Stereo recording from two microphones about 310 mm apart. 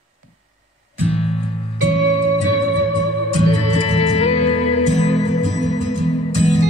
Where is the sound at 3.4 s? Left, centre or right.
Centre.